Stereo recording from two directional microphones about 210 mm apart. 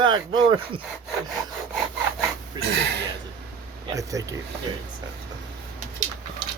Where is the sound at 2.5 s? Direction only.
20° right (ahead or behind).